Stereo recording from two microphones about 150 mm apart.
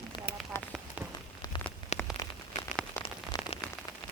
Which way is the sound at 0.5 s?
15° left (ahead or behind).